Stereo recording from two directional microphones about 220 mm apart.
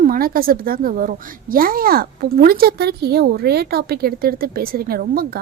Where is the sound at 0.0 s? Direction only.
40° right (ahead or behind).